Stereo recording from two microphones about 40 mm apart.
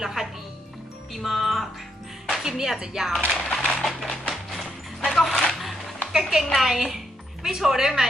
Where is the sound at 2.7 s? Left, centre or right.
Centre.